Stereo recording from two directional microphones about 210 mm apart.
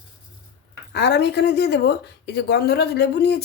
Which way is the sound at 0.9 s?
50° left (ahead or behind).